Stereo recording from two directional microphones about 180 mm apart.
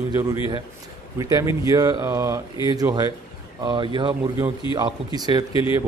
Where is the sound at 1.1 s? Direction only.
20° right (ahead or behind).